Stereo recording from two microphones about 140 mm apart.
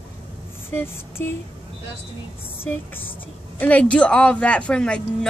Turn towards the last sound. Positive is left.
turn(degrees=5)  # may be behind; listen again after turning